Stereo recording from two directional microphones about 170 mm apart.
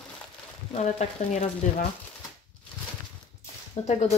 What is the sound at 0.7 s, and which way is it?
Speech, 40° left (ahead or behind).